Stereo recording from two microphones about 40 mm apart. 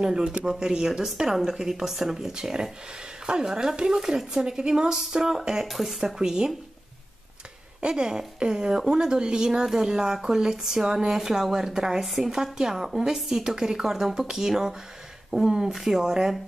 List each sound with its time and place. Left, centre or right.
0.0 s speech: right
5.7 s speech: centre
7.8 s speech: centre